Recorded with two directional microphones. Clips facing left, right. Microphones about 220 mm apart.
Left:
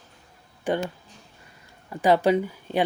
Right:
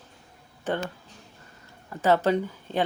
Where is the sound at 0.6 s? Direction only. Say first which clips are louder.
Left 3 dB; 15° left (ahead or behind).